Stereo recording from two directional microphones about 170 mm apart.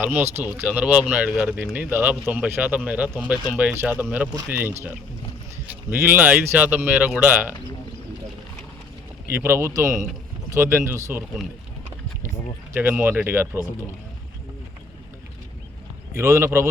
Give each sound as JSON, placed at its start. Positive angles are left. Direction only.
{"t": 0.0, "sound": "speech", "side_deg": -10}
{"t": 9.3, "sound": "speech", "side_deg": -15}
{"t": 12.7, "sound": "speech", "side_deg": -10}
{"t": 16.1, "sound": "speech", "side_deg": -15}